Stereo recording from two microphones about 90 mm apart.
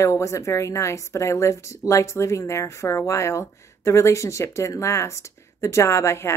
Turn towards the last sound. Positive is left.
turn(degrees=30)  # may be behind; listen again after turning